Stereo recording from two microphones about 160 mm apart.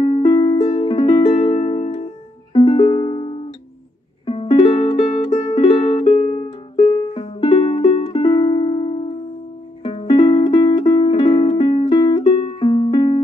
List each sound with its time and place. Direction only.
0.0 s music: 30° left (ahead or behind)
5.0 s music: 50° left (ahead or behind)
5.5 s music: 35° left (ahead or behind)